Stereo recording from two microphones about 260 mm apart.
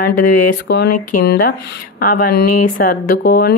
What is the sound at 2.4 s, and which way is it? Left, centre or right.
Speech, left.